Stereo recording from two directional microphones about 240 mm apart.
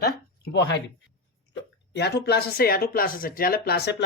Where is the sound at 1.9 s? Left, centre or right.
Left.